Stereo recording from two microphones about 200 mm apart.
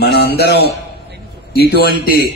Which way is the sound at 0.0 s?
50° left (ahead or behind).